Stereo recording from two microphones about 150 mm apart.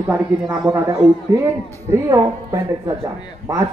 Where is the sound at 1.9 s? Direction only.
20° right (ahead or behind).